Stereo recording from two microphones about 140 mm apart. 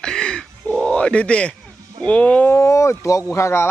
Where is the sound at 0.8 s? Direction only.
5° left (ahead or behind).